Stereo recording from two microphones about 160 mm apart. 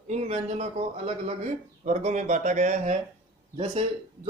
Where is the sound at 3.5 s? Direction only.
40° right (ahead or behind).